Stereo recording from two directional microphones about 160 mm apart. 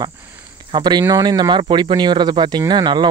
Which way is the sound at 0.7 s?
25° right (ahead or behind).